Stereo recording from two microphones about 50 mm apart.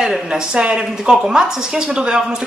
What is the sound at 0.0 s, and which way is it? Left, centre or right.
Speech, centre.